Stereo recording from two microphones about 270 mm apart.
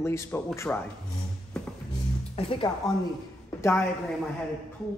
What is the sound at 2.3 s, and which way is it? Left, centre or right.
Speech, centre.